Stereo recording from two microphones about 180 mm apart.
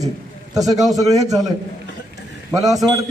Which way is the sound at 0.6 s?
20° right (ahead or behind).